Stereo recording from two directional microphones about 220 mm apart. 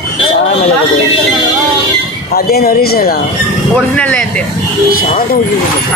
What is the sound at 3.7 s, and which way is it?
Speech, 5° left (ahead or behind).